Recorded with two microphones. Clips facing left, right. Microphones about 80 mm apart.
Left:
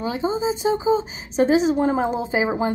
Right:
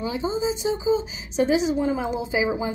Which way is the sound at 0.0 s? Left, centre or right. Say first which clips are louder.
Left 2 dB; left.